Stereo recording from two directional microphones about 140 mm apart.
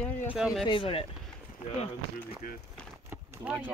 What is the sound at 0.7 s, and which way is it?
Speech, 40° left (ahead or behind).